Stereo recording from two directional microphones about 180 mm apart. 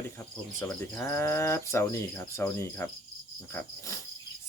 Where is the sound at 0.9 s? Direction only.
15° left (ahead or behind).